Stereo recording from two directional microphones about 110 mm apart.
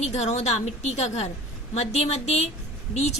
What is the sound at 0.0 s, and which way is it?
A woman's voice, 90° left.